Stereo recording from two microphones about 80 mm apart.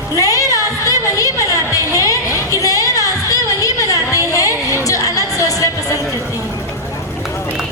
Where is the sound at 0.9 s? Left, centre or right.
Left.